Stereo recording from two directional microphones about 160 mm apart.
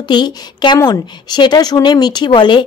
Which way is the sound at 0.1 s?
25° left (ahead or behind).